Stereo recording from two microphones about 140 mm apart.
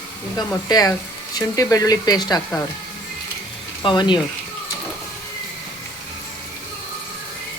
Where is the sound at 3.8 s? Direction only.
35° left (ahead or behind).